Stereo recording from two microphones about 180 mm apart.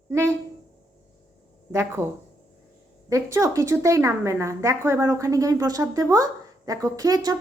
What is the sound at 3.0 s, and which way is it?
A woman's voice, 15° right (ahead or behind).